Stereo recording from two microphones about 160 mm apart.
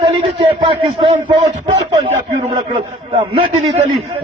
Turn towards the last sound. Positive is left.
turn(degrees=-35)  # may be behind; listen again after turning